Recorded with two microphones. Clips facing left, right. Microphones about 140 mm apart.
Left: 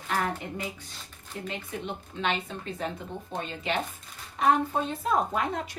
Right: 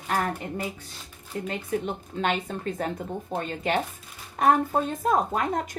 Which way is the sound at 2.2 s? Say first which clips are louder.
Right 3 dB; 45° right (ahead or behind).